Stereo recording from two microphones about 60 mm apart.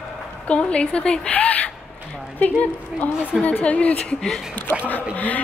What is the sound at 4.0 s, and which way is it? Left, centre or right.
Speech, centre.